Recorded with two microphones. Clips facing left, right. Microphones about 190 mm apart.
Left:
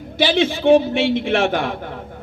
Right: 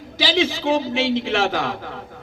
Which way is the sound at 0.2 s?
55° left (ahead or behind).